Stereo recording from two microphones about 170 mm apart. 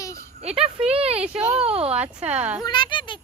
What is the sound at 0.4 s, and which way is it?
Speech, 35° right (ahead or behind).